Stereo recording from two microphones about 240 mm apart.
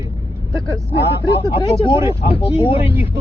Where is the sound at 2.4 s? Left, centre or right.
Left.